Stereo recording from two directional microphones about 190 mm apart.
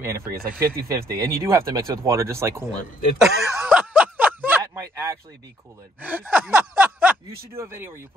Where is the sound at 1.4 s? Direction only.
15° right (ahead or behind).